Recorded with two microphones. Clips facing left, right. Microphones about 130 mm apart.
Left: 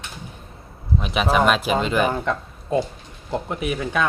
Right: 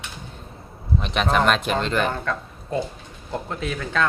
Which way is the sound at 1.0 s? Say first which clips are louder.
Left 2 dB; 5° left (ahead or behind).